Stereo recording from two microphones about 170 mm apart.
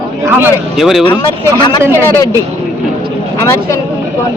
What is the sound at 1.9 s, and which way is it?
Speech, 20° left (ahead or behind).